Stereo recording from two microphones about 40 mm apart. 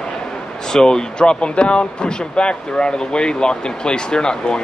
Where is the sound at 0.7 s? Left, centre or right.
Centre.